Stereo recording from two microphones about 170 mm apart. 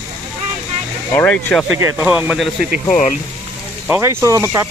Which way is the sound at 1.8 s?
15° right (ahead or behind).